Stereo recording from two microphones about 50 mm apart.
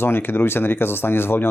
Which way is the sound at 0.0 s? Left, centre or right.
Left.